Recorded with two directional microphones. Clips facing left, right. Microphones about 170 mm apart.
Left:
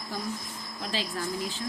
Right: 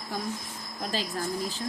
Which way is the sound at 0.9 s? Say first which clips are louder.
Right 1 dB; 45° right (ahead or behind).